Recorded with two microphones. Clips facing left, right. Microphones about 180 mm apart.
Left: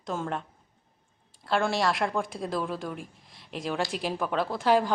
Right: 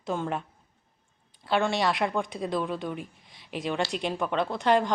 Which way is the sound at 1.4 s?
Centre (ahead or behind).